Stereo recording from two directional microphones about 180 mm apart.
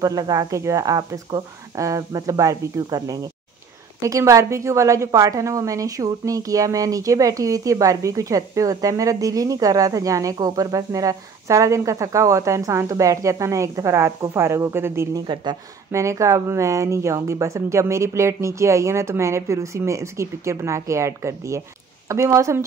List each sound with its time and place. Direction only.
0.0 s a woman's voice: 20° right (ahead or behind)